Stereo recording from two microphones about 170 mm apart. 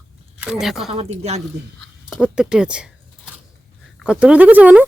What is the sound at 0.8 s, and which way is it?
Speech, 40° right (ahead or behind).